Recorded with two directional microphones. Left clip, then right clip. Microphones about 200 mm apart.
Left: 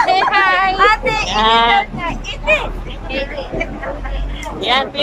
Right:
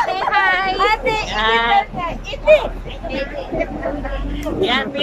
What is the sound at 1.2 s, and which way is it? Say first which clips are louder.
Speech: left 6 dB; 15° left (ahead or behind).